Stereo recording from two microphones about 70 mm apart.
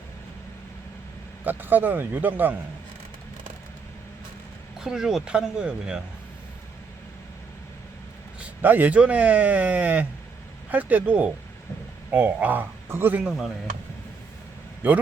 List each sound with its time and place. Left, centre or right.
1.5 s speech: right
4.8 s speech: centre
8.4 s speech: right
14.8 s speech: right